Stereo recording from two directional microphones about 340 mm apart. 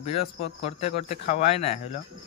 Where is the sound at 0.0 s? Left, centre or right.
Centre.